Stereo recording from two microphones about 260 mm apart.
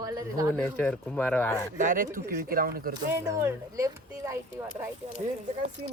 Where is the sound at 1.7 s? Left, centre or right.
Right.